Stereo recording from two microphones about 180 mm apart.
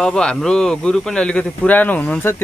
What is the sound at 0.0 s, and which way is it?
Speech, 5° left (ahead or behind).